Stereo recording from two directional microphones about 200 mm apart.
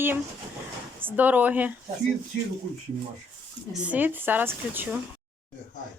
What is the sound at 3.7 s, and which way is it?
Speech, 5° right (ahead or behind).